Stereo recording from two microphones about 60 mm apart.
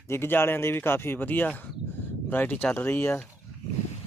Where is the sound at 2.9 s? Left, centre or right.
Left.